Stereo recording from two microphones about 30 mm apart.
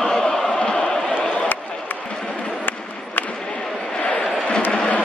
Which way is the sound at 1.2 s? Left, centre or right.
Left.